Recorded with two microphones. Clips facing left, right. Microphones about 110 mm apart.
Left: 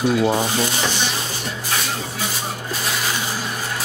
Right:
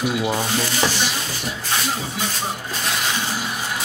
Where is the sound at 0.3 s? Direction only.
15° left (ahead or behind).